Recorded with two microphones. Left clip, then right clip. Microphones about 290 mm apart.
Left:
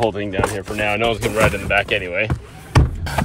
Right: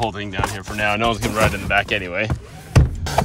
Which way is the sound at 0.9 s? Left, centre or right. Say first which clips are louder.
Left 3 dB; centre.